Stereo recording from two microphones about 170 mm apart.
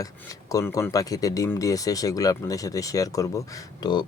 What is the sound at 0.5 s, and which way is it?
Speech, 20° left (ahead or behind).